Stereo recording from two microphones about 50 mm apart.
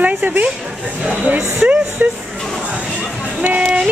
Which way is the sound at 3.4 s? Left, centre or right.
Right.